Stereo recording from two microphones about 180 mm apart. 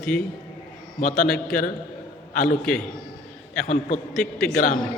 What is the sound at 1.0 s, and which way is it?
Speech, 45° left (ahead or behind).